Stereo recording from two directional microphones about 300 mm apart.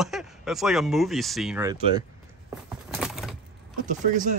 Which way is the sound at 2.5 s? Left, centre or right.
Centre.